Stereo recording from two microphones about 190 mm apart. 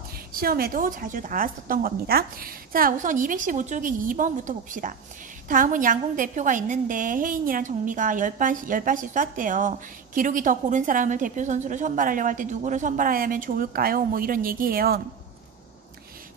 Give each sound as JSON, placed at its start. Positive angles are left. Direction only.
{"t": 0.3, "sound": "a woman's voice", "side_deg": -50}